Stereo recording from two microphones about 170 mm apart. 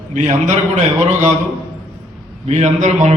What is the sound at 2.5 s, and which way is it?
Speech, 40° right (ahead or behind).